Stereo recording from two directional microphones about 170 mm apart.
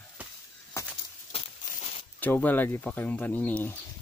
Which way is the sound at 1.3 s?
35° left (ahead or behind).